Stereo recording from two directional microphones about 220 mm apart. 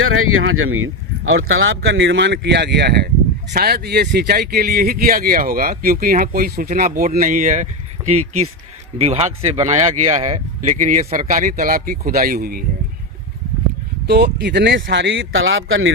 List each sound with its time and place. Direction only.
0.0 s a man's voice: 70° right (ahead or behind); by 12.6 s 40° right (ahead or behind)
14.1 s speech: 50° right (ahead or behind)